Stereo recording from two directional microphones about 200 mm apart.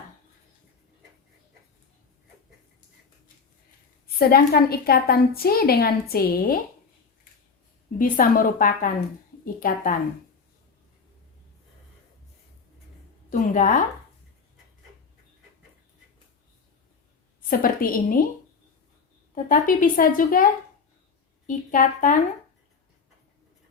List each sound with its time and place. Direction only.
4.0 s a woman's voice: 50° left (ahead or behind)
7.9 s a woman's voice: 45° left (ahead or behind)
13.3 s a woman's voice: 40° left (ahead or behind)
17.5 s a woman's voice: 45° left (ahead or behind)
19.3 s a woman's voice: 45° left (ahead or behind)